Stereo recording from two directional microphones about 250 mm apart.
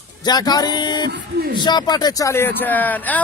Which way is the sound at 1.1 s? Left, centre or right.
Right.